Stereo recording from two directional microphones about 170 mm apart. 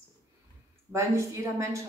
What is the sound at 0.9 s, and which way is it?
Speech, 15° right (ahead or behind).